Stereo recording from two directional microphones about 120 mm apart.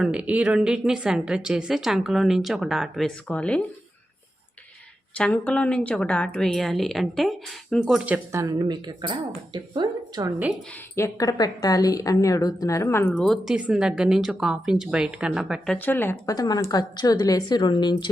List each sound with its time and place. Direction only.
0.0 s a woman's voice: 10° right (ahead or behind)
3.2 s speech: 10° left (ahead or behind)
5.1 s a woman's voice: 10° left (ahead or behind); by 8.2 s 10° right (ahead or behind)
8.3 s speech: 30° right (ahead or behind)
10.9 s a woman's voice: 25° left (ahead or behind)
13.1 s a woman's voice: 5° left (ahead or behind)
13.6 s a woman's voice: 10° right (ahead or behind)
15.6 s speech: 10° left (ahead or behind)
16.2 s a woman's voice: 30° left (ahead or behind)